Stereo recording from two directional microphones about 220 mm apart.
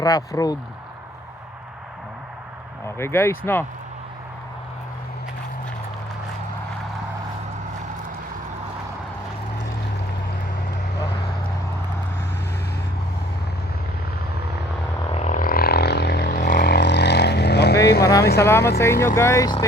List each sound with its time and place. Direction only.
0.0 s speech: 15° left (ahead or behind)
2.8 s speech: 10° left (ahead or behind)
15.1 s vehicle: 30° left (ahead or behind); by 17.7 s 50° left (ahead or behind)
18.2 s a sound: 45° left (ahead or behind)
18.4 s speech: 10° left (ahead or behind)